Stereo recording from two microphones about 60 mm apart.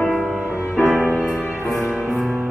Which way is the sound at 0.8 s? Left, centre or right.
Right.